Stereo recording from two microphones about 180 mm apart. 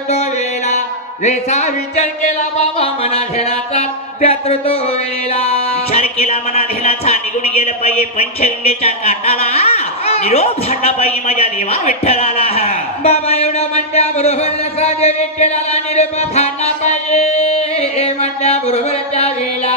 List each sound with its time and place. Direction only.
0.1 s music: 40° left (ahead or behind)